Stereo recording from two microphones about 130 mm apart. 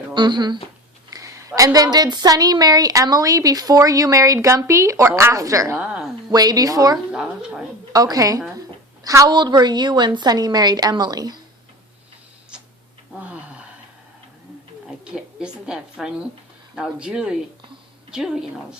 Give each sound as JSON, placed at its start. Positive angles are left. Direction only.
{"t": 0.1, "sound": "a woman's voice", "side_deg": -35}
{"t": 5.7, "sound": "a sound", "side_deg": -10}
{"t": 6.3, "sound": "a woman's voice", "side_deg": -30}
{"t": 7.1, "sound": "speech", "side_deg": -5}
{"t": 7.9, "sound": "a woman's voice", "side_deg": -30}
{"t": 14.8, "sound": "a sound", "side_deg": -5}
{"t": 16.7, "sound": "a woman's voice", "side_deg": -5}